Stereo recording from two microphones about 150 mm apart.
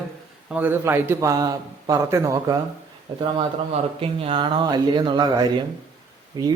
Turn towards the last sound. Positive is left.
turn(degrees=-30)  # may be behind; listen again after turning